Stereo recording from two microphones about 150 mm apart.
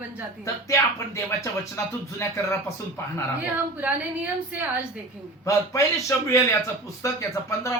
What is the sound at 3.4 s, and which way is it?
A woman's voice, 10° right (ahead or behind).